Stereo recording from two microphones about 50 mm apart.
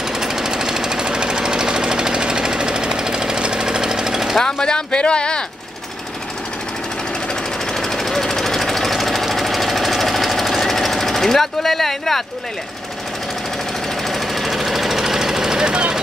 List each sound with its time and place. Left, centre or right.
0.2 s jackhammer: centre
4.4 s speech: centre
7.7 s jackhammer: centre
14.0 s jackhammer: centre